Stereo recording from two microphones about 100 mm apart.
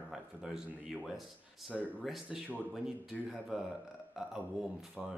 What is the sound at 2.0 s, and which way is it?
Speech, 5° right (ahead or behind).